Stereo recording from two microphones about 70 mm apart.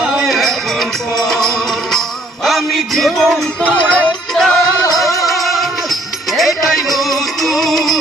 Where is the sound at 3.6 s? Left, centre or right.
Centre.